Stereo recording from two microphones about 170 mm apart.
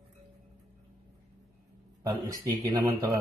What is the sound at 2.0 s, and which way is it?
Speech, 20° right (ahead or behind).